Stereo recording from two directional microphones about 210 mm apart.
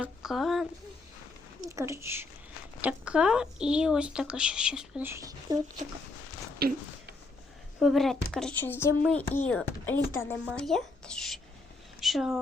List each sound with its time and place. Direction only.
0.0 s a woman's voice: centre (ahead or behind)
1.7 s speech: 15° right (ahead or behind)
6.6 s speech: 50° right (ahead or behind)
7.8 s speech: centre (ahead or behind)